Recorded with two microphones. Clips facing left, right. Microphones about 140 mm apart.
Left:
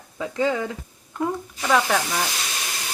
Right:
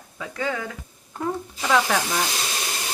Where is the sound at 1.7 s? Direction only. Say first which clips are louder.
Even; centre (ahead or behind).